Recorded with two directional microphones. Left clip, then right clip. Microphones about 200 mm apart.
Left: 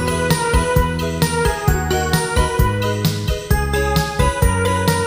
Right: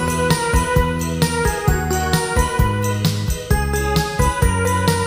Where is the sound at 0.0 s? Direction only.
Centre (ahead or behind).